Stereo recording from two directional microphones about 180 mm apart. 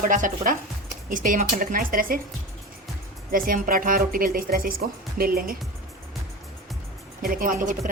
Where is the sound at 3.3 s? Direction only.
50° right (ahead or behind).